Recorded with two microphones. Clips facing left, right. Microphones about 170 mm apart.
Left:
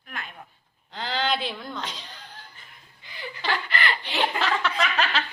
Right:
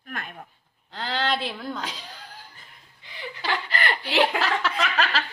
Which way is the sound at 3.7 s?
45° right (ahead or behind).